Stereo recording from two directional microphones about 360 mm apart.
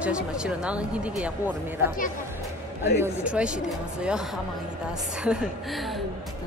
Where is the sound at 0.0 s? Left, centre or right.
Centre.